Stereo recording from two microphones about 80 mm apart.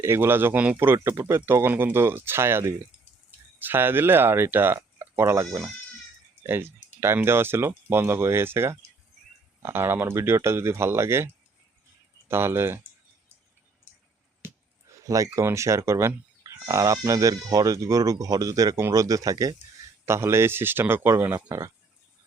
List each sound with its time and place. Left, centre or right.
0.0 s a man's voice: right
1.1 s speech: right
12.3 s speech: right
14.4 s a sound: right
15.4 s speech: right
16.4 s speech: right
20.1 s a man's voice: right